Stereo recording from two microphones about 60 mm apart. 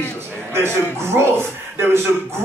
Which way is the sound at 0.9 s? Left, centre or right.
Right.